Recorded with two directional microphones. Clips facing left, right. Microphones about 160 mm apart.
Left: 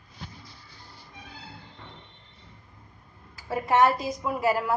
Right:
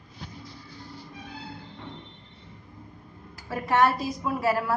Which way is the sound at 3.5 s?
20° left (ahead or behind).